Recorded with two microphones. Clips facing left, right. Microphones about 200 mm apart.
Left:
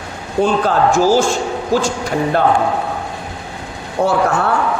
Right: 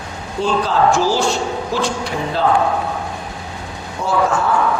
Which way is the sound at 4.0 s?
60° left (ahead or behind).